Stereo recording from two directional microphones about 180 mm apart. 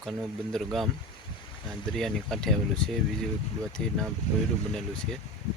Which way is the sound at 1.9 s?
Centre (ahead or behind).